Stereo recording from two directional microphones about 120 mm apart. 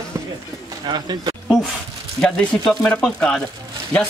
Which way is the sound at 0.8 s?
35° right (ahead or behind).